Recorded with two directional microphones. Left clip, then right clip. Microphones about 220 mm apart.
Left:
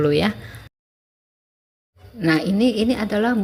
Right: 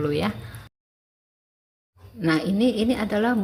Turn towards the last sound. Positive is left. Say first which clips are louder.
# left 2 dB
turn(degrees=5)  # may be behind; listen again after turning